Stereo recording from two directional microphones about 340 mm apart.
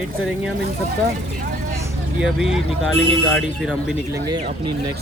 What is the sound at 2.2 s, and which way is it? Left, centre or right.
Speech, centre.